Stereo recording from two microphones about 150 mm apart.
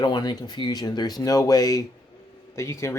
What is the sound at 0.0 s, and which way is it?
Speech, 25° left (ahead or behind).